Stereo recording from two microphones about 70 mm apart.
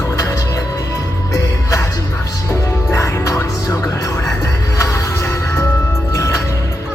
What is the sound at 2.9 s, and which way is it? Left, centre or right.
Music, left.